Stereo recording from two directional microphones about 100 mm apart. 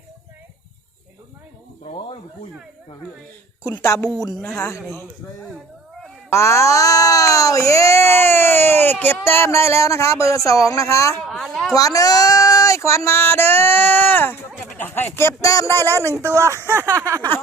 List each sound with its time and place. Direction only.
1.8 s a sound: 90° left
3.6 s speech: 30° left (ahead or behind)
6.3 s speech: 30° left (ahead or behind)
11.3 s a sound: centre (ahead or behind)
11.7 s speech: 35° left (ahead or behind)
15.7 s speech: 20° left (ahead or behind)
16.2 s speech: 30° right (ahead or behind)